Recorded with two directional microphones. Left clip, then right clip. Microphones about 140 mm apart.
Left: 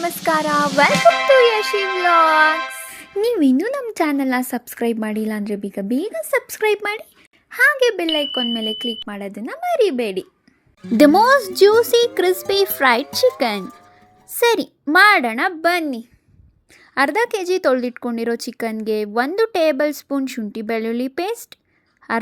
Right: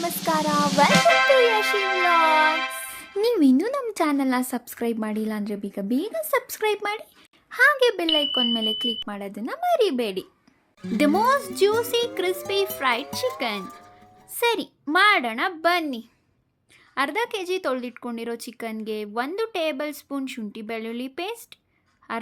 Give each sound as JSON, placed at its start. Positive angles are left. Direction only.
{"t": 0.0, "sound": "sizzle", "side_deg": 0}
{"t": 0.4, "sound": "speech", "side_deg": 0}
{"t": 1.4, "sound": "a woman's voice", "side_deg": 20}
{"t": 10.9, "sound": "speech", "side_deg": 50}
{"t": 13.6, "sound": "speech", "side_deg": 0}
{"t": 14.3, "sound": "a woman's voice", "side_deg": 35}
{"t": 16.9, "sound": "speech", "side_deg": 40}